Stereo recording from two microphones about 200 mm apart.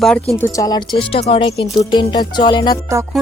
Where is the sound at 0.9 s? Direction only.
30° left (ahead or behind).